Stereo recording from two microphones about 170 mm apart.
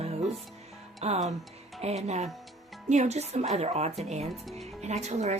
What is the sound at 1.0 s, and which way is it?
Speech, 40° right (ahead or behind).